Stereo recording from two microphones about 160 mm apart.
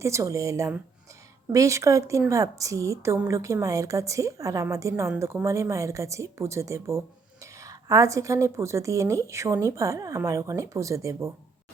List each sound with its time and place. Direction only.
0.0 s a woman's voice: 20° right (ahead or behind)